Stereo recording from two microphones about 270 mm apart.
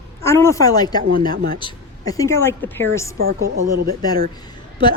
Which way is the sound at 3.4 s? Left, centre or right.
Right.